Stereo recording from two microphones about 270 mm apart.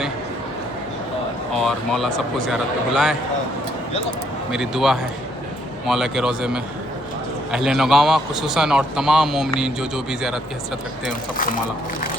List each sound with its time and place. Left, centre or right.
1.5 s a man's voice: centre
4.5 s a man's voice: centre
11.3 s speech: left